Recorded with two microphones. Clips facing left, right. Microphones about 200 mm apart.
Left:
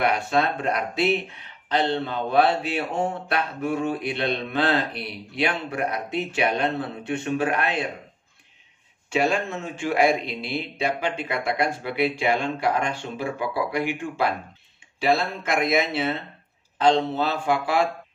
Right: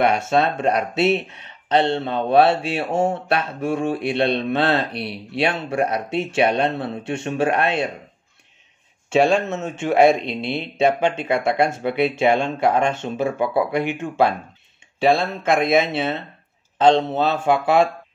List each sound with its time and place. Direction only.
0.0 s speech: 25° right (ahead or behind)
2.9 s speech: 45° right (ahead or behind)
3.3 s speech: 25° right (ahead or behind)
9.1 s a man's voice: 25° right (ahead or behind)